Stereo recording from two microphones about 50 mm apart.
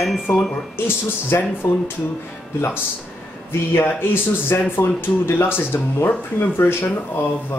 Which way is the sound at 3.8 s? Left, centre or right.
Left.